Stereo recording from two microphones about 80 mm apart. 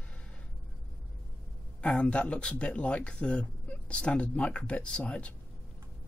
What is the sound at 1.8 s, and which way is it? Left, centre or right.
Speech, centre.